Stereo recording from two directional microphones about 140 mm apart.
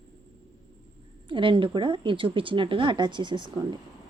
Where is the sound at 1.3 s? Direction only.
35° right (ahead or behind).